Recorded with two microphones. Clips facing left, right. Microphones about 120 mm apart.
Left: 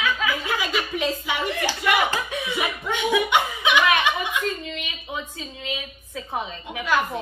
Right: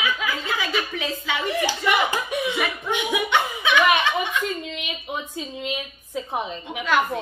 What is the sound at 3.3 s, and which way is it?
Chuckle, 15° left (ahead or behind).